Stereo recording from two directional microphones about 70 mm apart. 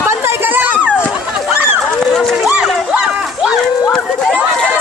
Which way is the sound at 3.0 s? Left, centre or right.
Centre.